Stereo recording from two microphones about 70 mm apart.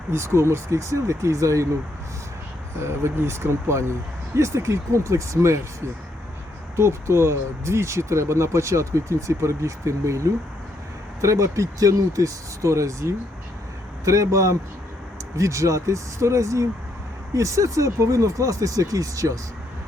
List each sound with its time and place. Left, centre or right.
0.1 s speech: right
2.8 s speech: right
6.7 s speech: right